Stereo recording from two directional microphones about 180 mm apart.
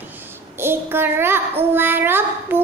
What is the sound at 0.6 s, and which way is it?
Speech, 10° right (ahead or behind).